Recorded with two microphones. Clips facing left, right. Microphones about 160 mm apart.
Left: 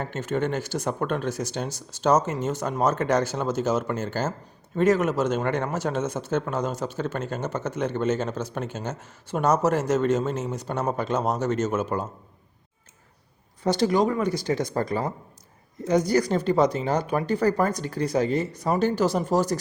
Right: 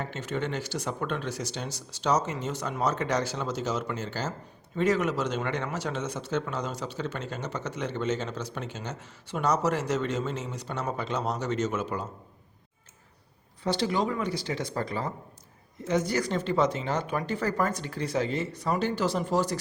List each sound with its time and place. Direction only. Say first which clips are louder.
0.0 s speech: left 5 dB; 45° left (ahead or behind)
13.7 s speech: left 6 dB; 45° left (ahead or behind)